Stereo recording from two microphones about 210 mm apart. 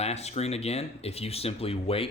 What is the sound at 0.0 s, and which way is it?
Speech, 30° left (ahead or behind).